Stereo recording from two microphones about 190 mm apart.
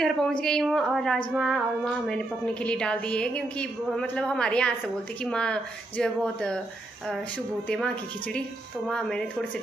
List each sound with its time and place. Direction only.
0.0 s a woman's voice: 5° left (ahead or behind)
7.6 s a woman's voice: 5° left (ahead or behind)